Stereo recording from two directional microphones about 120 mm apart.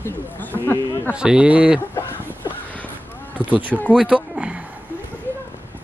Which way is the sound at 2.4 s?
10° left (ahead or behind).